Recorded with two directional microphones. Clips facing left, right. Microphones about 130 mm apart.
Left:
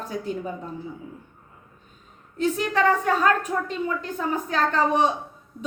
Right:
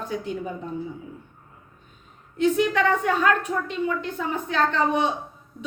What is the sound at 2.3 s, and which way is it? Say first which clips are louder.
Speech: right 3 dB; 40° left (ahead or behind).